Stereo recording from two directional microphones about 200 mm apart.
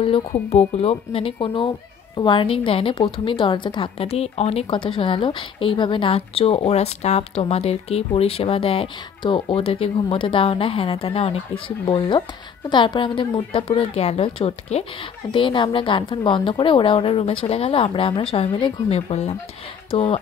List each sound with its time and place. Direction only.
0.5 s a woman's voice: 30° left (ahead or behind)